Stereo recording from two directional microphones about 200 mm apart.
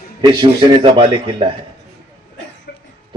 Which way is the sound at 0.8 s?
25° right (ahead or behind).